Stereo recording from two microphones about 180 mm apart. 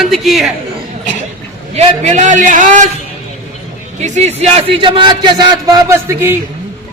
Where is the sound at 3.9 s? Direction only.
40° right (ahead or behind); by 6.3 s 15° right (ahead or behind).